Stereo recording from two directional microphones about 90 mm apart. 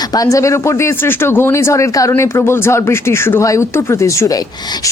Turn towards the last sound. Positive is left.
turn(degrees=35)  # may be behind; listen again after turning